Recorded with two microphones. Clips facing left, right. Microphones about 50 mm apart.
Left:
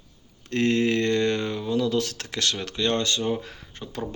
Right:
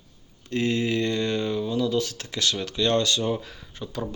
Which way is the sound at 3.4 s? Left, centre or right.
Left.